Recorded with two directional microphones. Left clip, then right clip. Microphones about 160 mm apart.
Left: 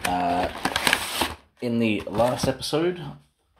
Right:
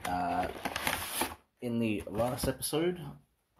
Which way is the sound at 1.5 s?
Centre (ahead or behind).